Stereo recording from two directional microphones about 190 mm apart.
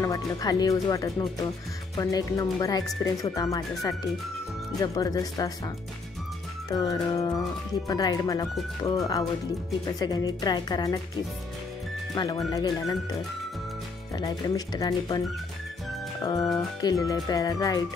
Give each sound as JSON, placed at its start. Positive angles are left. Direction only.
{"t": 0.0, "sound": "speech", "side_deg": 20}
{"t": 6.7, "sound": "speech", "side_deg": 20}
{"t": 12.2, "sound": "speech", "side_deg": 20}
{"t": 14.7, "sound": "speech", "side_deg": 20}